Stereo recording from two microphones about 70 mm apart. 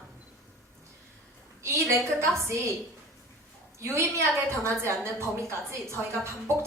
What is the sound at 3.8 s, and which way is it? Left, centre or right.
A woman's voice, right.